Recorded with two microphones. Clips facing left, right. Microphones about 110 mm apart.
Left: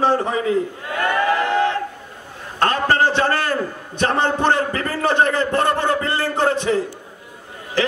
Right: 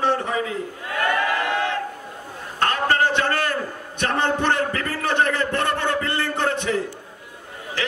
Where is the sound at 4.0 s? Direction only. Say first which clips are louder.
Left 3 dB; 35° left (ahead or behind).